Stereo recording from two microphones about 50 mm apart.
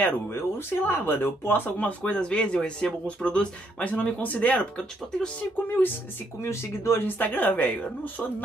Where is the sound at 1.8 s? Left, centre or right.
Left.